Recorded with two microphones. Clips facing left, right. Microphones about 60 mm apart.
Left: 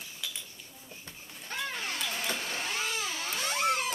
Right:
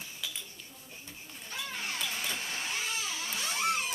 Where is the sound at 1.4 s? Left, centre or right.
Left.